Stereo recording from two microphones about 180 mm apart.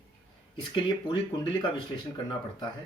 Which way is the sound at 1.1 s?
25° left (ahead or behind).